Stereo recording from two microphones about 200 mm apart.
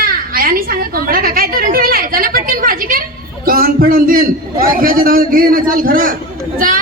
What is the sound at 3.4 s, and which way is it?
A man's voice, 45° right (ahead or behind).